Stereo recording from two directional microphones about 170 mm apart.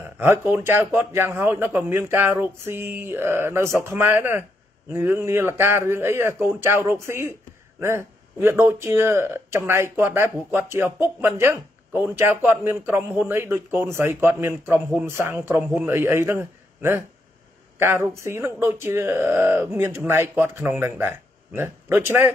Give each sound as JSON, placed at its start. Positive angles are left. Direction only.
{"t": 0.2, "sound": "speech", "side_deg": -15}